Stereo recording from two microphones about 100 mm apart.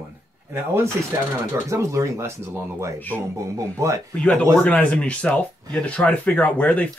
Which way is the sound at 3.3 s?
30° right (ahead or behind).